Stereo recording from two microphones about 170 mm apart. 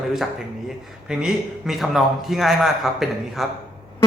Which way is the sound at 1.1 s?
5° right (ahead or behind).